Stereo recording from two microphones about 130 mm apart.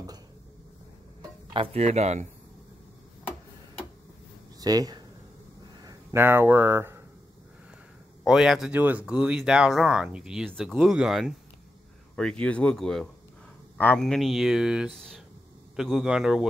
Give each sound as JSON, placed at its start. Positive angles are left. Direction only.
{"t": 1.5, "sound": "speech", "side_deg": -45}
{"t": 4.6, "sound": "speech", "side_deg": -30}
{"t": 6.1, "sound": "speech", "side_deg": -15}
{"t": 8.2, "sound": "speech", "side_deg": 0}
{"t": 12.2, "sound": "speech", "side_deg": 10}
{"t": 14.0, "sound": "speech", "side_deg": 0}